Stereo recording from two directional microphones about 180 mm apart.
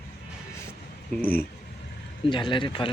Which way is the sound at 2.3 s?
25° left (ahead or behind).